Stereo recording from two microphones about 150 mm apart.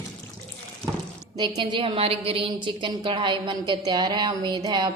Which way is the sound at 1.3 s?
30° right (ahead or behind).